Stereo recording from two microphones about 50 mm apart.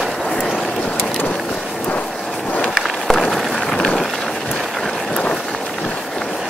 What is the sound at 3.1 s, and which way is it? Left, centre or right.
Run, centre.